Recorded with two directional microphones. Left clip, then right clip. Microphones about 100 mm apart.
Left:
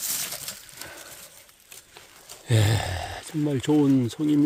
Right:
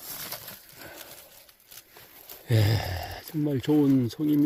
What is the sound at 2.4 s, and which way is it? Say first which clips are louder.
Speech: left 3 dB; 5° right (ahead or behind).